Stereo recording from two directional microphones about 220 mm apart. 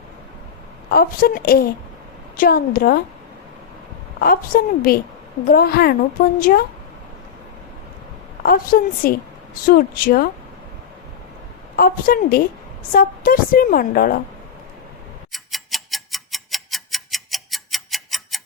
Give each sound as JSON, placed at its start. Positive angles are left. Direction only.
{"t": 0.9, "sound": "a woman's voice", "side_deg": 40}
{"t": 4.2, "sound": "a woman's voice", "side_deg": 40}
{"t": 8.4, "sound": "a woman's voice", "side_deg": 40}
{"t": 11.8, "sound": "a woman's voice", "side_deg": 40}
{"t": 15.3, "sound": "tick-tock", "side_deg": 0}